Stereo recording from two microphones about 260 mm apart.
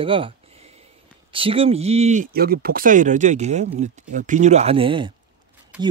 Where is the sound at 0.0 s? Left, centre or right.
Right.